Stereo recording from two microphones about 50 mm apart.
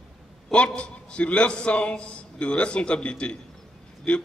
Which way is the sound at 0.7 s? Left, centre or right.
Left.